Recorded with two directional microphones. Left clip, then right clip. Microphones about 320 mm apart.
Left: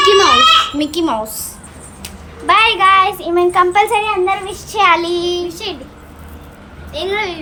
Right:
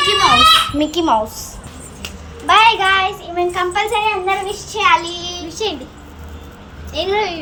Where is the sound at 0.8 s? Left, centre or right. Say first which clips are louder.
Right 2 dB; centre.